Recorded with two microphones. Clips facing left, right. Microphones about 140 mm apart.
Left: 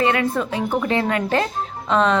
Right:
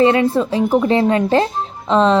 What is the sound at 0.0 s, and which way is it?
Speech, 30° right (ahead or behind).